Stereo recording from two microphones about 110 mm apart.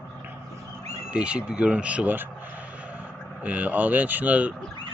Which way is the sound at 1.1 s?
10° right (ahead or behind).